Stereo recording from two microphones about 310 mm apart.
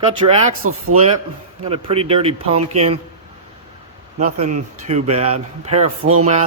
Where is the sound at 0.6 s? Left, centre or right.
Right.